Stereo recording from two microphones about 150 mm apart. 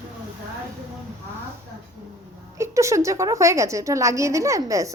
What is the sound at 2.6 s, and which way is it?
A woman's voice, 20° right (ahead or behind).